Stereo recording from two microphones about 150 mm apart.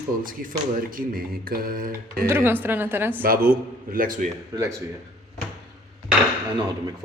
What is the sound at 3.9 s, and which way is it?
Speech, 65° right (ahead or behind).